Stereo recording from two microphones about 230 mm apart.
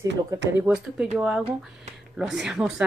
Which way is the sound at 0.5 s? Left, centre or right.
Centre.